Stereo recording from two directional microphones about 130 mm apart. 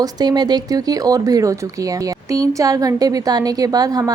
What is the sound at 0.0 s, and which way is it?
Speech, 30° right (ahead or behind).